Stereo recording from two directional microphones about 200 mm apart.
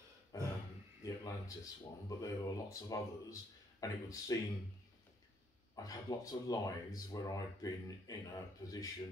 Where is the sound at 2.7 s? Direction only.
15° left (ahead or behind).